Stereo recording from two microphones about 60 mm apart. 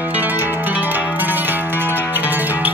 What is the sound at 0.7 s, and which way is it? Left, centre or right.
Zither, right.